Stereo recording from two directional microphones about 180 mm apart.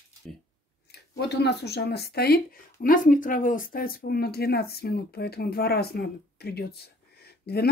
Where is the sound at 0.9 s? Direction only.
70° left (ahead or behind).